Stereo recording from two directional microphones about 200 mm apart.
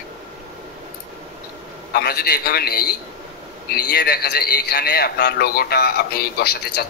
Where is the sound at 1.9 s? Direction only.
50° left (ahead or behind).